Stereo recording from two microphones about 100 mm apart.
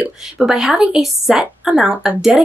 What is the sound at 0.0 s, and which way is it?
A woman's voice, 5° right (ahead or behind).